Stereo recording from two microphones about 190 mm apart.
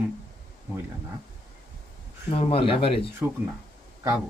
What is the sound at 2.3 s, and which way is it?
Speech, 30° left (ahead or behind).